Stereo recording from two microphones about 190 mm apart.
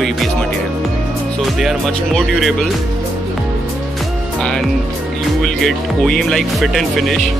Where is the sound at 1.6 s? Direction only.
Centre (ahead or behind).